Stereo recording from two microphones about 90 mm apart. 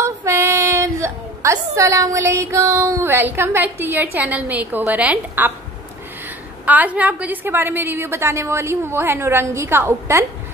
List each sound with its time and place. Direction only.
0.0 s a sound: 30° right (ahead or behind)
3.0 s a woman's voice: 25° right (ahead or behind)
6.6 s a woman's voice: 15° right (ahead or behind)